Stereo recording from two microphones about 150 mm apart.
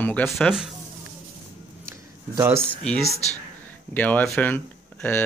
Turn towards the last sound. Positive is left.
turn(degrees=10)  # may be behind; listen again after turning